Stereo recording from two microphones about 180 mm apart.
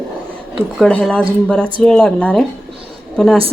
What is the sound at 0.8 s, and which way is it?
A woman's voice, 5° left (ahead or behind).